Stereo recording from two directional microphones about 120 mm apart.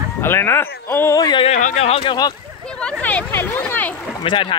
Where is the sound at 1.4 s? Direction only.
85° left.